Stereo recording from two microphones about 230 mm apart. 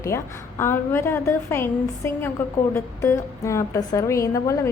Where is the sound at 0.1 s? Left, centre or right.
Centre.